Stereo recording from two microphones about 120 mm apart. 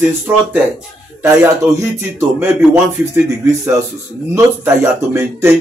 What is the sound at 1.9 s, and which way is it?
A man's voice, 20° right (ahead or behind).